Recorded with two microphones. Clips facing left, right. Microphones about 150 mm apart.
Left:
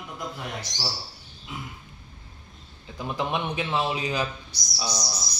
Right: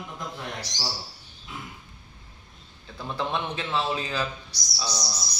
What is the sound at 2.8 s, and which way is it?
A man's voice, 15° left (ahead or behind).